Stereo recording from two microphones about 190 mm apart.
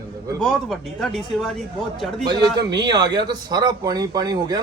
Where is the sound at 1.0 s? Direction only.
Centre (ahead or behind).